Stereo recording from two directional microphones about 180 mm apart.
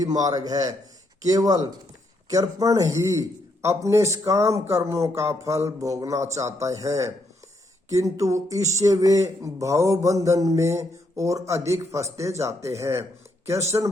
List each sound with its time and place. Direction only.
0.0 s a man's voice: 20° right (ahead or behind)